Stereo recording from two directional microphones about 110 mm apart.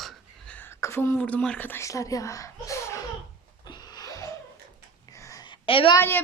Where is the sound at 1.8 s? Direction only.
30° left (ahead or behind).